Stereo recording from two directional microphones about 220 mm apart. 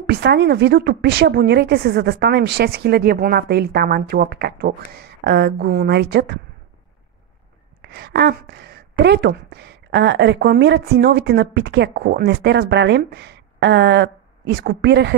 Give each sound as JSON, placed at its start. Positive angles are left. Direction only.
{"t": 0.0, "sound": "a woman's voice", "side_deg": -50}
{"t": 7.8, "sound": "a woman's voice", "side_deg": -45}